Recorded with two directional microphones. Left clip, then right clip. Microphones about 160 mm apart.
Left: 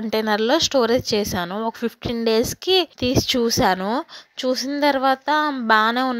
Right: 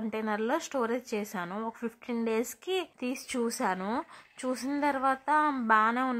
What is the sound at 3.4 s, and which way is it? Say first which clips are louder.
Speech: left 8 dB; 25° left (ahead or behind).